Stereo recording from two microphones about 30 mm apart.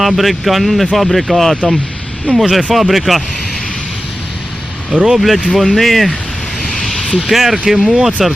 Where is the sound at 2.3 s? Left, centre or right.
Left.